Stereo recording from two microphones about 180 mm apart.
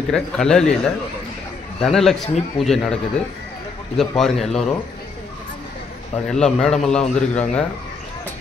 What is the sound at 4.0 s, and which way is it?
Speech, centre (ahead or behind).